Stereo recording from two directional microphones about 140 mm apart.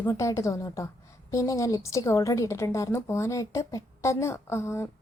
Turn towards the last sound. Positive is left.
turn(degrees=20)  # may be behind; listen again after turning